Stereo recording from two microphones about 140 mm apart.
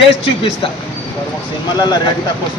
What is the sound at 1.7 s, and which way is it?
Speech, 30° left (ahead or behind).